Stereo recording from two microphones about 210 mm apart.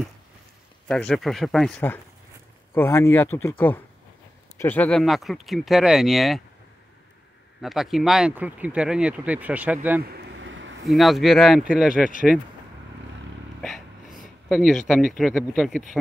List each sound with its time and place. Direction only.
0.8 s speech: centre (ahead or behind)
7.6 s speech: centre (ahead or behind)
10.1 s vehicle: 65° right (ahead or behind)
10.9 s speech: centre (ahead or behind)
11.9 s speech: 40° left (ahead or behind)
13.6 s a sound: centre (ahead or behind)
14.9 s speech: centre (ahead or behind)